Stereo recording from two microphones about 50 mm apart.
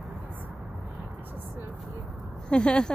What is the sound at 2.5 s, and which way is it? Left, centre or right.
Speech, centre.